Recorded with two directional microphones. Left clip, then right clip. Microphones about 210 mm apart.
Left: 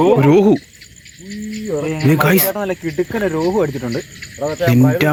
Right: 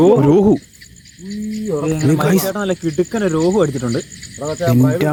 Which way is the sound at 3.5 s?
45° right (ahead or behind).